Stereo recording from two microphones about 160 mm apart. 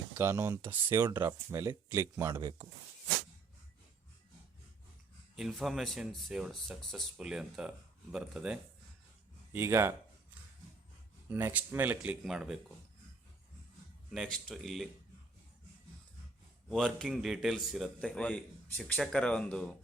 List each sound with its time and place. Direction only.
0.2 s speech: 15° right (ahead or behind)
5.4 s speech: centre (ahead or behind)
9.5 s speech: 15° right (ahead or behind)
11.3 s speech: 10° right (ahead or behind)
14.1 s speech: 5° left (ahead or behind)
16.6 s speech: 5° left (ahead or behind)